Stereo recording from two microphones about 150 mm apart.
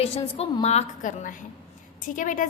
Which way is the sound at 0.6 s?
50° left (ahead or behind).